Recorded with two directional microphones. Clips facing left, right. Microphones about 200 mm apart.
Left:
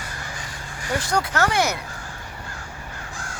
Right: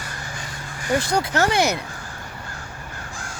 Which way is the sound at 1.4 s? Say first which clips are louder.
Right 2 dB; 20° right (ahead or behind).